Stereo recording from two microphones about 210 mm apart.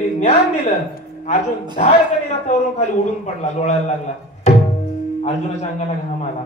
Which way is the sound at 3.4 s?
35° left (ahead or behind).